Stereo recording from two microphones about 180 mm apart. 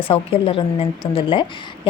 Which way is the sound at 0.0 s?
30° left (ahead or behind).